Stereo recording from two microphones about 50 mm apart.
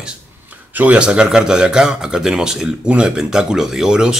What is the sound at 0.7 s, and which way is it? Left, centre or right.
Speech, right.